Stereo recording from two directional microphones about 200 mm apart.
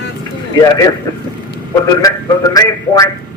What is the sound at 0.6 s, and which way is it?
A man's voice, 15° left (ahead or behind).